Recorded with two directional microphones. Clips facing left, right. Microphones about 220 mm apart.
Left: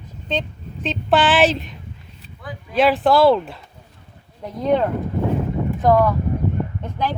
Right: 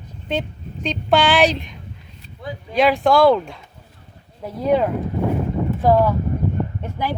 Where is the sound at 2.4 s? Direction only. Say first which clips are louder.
Right 4 dB; 25° right (ahead or behind).